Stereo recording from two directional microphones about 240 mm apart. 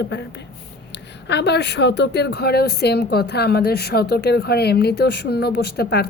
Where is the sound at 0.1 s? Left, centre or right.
Left.